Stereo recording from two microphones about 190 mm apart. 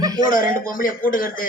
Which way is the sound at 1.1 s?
45° left (ahead or behind).